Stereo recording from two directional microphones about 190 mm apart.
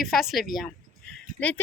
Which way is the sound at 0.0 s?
Centre (ahead or behind).